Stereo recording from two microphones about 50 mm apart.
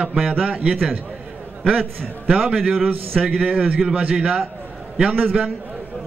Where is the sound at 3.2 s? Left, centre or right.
Right.